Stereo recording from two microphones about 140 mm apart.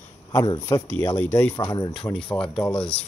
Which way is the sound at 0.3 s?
25° left (ahead or behind).